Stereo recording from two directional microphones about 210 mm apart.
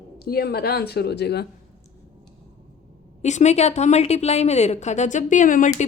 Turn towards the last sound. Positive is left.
turn(degrees=40)  # may be behind; listen again after turning